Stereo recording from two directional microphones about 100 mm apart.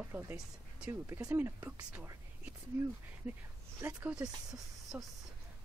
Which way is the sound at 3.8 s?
20° right (ahead or behind).